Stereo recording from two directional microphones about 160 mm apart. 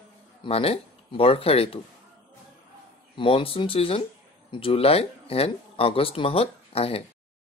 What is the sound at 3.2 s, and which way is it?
Speech, 35° left (ahead or behind).